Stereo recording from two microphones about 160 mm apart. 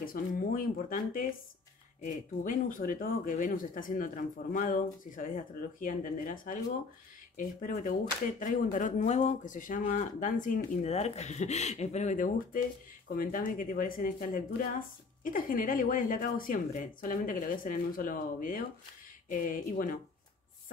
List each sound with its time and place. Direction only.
0.0 s speech: 60° left (ahead or behind)